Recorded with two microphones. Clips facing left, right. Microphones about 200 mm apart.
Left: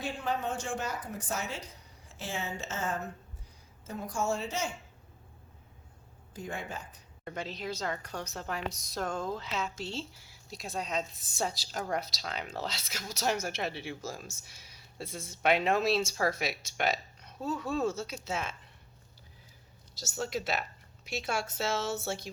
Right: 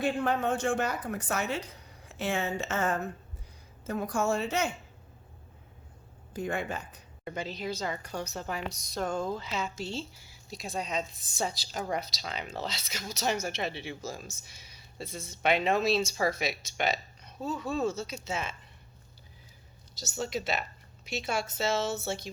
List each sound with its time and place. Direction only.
0.0 s a woman's voice: 60° right (ahead or behind)
6.3 s a woman's voice: 65° right (ahead or behind)
7.3 s a woman's voice: centre (ahead or behind)
14.7 s a sound: 5° left (ahead or behind)
15.4 s a woman's voice: centre (ahead or behind)
20.0 s speech: 5° left (ahead or behind)